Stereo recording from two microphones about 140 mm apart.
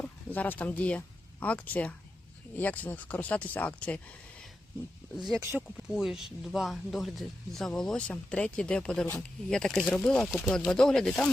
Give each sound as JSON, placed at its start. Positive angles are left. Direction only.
{"t": 0.0, "sound": "speech", "side_deg": 10}
{"t": 5.1, "sound": "speech", "side_deg": 0}
{"t": 5.4, "sound": "speech", "side_deg": -20}
{"t": 5.7, "sound": "speech", "side_deg": -5}